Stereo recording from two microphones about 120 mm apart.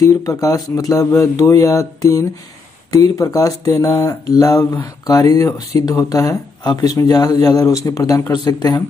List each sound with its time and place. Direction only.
0.0 s speech: 30° left (ahead or behind)